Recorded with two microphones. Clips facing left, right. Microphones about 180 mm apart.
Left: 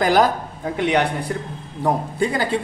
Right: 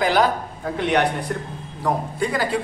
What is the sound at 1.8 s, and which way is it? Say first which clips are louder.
Speech: left 2 dB; 25° left (ahead or behind).